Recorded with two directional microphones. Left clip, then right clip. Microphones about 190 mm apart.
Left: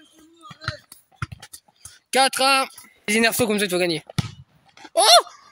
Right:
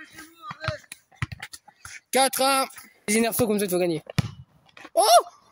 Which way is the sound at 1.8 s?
Centre (ahead or behind).